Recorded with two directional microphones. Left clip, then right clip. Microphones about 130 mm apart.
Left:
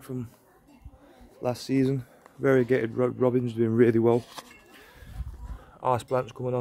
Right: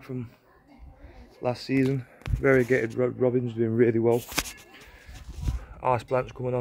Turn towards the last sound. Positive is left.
turn(degrees=10)  # may be behind; listen again after turning